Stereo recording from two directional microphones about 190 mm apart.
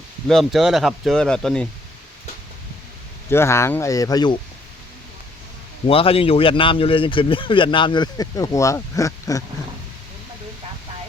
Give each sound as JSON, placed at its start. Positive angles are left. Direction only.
{"t": 0.3, "sound": "speech", "side_deg": 0}
{"t": 3.2, "sound": "speech", "side_deg": 15}
{"t": 5.9, "sound": "speech", "side_deg": 30}